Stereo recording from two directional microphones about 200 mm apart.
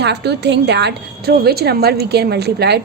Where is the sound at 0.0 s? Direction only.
55° right (ahead or behind).